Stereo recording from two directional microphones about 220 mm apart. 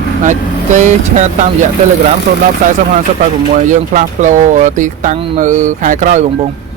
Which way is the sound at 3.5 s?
35° right (ahead or behind).